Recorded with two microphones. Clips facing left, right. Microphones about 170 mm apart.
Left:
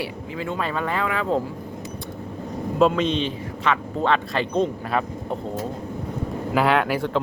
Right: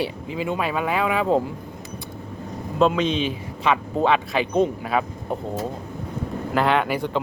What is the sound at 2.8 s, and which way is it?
Speech, centre (ahead or behind).